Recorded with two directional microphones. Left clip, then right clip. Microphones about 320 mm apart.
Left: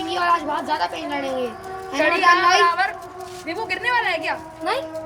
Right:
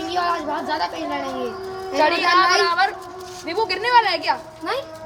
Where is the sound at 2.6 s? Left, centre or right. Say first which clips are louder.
Right 1 dB; right.